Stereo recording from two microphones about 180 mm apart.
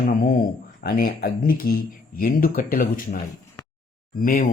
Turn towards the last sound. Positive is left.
turn(degrees=50)  # may be behind; listen again after turning